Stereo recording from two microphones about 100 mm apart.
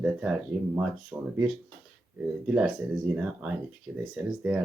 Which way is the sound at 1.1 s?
25° right (ahead or behind).